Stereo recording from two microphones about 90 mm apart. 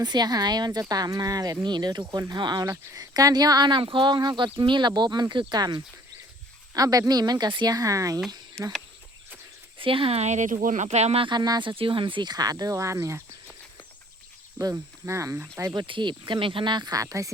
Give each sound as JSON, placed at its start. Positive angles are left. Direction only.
{"t": 0.0, "sound": "speech", "side_deg": -50}
{"t": 8.6, "sound": "speech", "side_deg": 5}
{"t": 9.7, "sound": "speech", "side_deg": -75}
{"t": 11.3, "sound": "speech", "side_deg": -50}
{"t": 11.7, "sound": "speech", "side_deg": -75}
{"t": 14.6, "sound": "speech", "side_deg": -35}
{"t": 15.7, "sound": "speech", "side_deg": -60}